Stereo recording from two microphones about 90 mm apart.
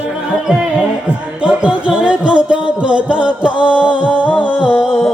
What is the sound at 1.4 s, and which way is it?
Music, 10° right (ahead or behind).